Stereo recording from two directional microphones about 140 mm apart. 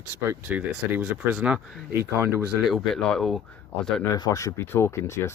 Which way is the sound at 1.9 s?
20° right (ahead or behind).